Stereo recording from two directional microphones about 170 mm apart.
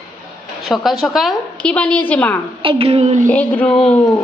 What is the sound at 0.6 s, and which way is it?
A woman's voice, centre (ahead or behind).